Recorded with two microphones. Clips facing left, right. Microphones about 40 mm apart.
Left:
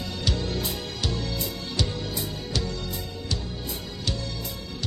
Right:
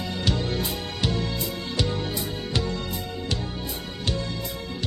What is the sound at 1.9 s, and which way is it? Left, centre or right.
Music, right.